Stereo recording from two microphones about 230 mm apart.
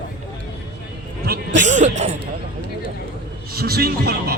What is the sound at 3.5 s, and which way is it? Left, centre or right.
Speech, right.